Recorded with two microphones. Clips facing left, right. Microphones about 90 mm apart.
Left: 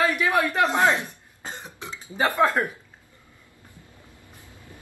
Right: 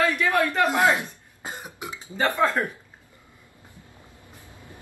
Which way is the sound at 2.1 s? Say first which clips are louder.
Left 1 dB; 15° left (ahead or behind).